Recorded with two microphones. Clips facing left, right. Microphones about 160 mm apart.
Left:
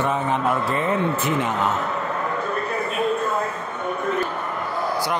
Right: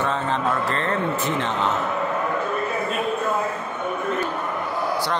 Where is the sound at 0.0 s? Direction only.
15° left (ahead or behind).